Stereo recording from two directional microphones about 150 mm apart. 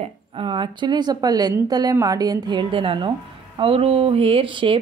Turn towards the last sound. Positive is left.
turn(degrees=-35)  # may be behind; listen again after turning